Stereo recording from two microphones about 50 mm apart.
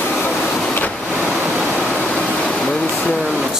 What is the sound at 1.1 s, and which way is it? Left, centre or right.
Waves, right.